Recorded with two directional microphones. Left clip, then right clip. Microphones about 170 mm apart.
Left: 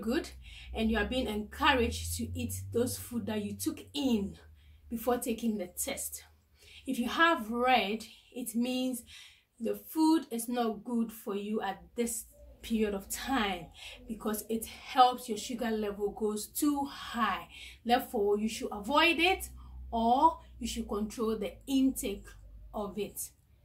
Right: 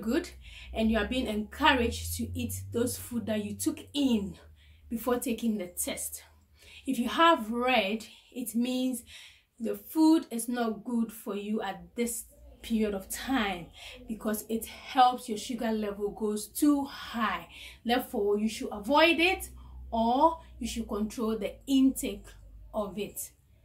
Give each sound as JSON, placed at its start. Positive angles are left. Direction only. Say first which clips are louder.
{"t": 0.0, "sound": "a woman's voice", "louder": "right 2 dB", "side_deg": -5}